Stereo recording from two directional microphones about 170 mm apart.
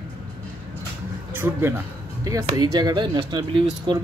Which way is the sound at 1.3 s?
15° right (ahead or behind).